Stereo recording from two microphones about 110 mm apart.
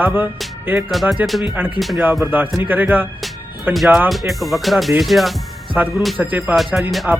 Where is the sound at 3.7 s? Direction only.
Centre (ahead or behind).